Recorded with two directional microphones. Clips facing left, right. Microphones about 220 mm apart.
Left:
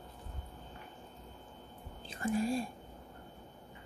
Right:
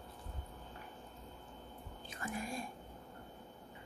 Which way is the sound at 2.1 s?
30° left (ahead or behind).